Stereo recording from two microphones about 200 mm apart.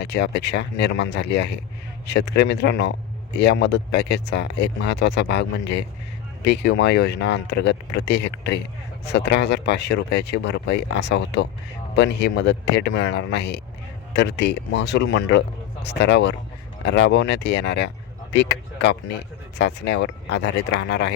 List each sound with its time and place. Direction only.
0.0 s speech: 55° left (ahead or behind)